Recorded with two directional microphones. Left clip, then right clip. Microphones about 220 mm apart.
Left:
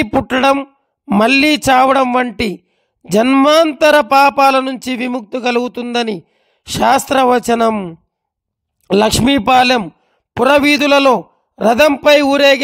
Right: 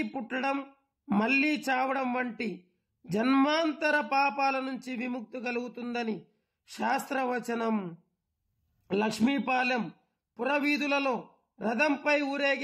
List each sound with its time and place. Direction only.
0.0 s speech: 45° left (ahead or behind)
0.6 s a sound: 30° left (ahead or behind)
1.2 s speech: 45° left (ahead or behind)